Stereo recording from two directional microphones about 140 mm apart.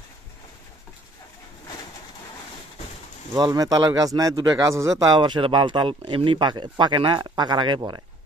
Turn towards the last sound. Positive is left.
turn(degrees=-35)  # may be behind; listen again after turning